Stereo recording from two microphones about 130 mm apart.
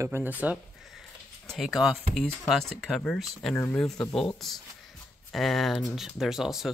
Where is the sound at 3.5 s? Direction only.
15° left (ahead or behind).